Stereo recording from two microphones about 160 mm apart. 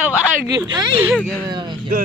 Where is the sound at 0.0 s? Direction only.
10° right (ahead or behind).